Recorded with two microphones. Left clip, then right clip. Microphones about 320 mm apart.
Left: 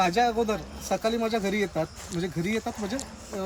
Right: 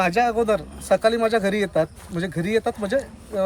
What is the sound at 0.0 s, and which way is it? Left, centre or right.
Speech, centre.